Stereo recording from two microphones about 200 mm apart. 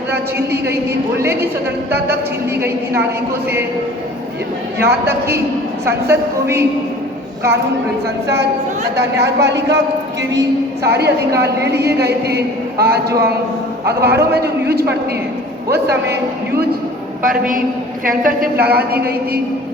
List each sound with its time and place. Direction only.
0.3 s a woman's voice: 10° right (ahead or behind)
2.6 s a woman's voice: 10° right (ahead or behind)
4.8 s a woman's voice: 10° right (ahead or behind)
9.0 s a woman's voice: 60° right (ahead or behind)
10.8 s a woman's voice: 55° right (ahead or behind)
17.2 s a woman's voice: 45° right (ahead or behind)